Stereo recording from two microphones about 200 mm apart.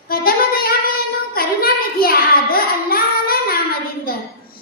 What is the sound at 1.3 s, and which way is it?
Child singing, 45° left (ahead or behind).